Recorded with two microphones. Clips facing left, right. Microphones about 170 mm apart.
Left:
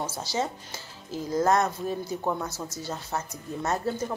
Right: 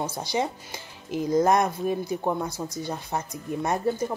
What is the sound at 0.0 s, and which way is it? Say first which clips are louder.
Speech: right 2 dB; 15° right (ahead or behind).